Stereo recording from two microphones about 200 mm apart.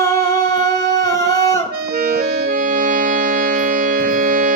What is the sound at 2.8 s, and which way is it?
Music, 40° right (ahead or behind).